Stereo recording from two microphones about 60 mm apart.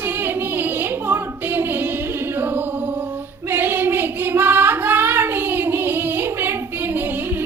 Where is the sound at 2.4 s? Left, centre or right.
Right.